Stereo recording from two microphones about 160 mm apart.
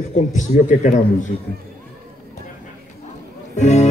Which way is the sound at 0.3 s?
50° left (ahead or behind).